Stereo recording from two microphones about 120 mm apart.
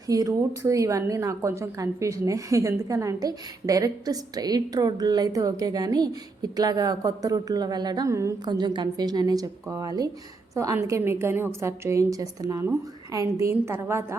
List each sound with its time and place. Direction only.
0.1 s a woman's voice: 30° right (ahead or behind)
8.4 s a woman's voice: 40° right (ahead or behind); by 14.2 s 20° right (ahead or behind)